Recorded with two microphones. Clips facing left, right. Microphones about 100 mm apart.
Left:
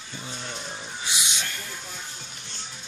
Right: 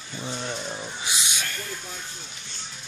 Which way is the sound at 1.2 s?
20° left (ahead or behind).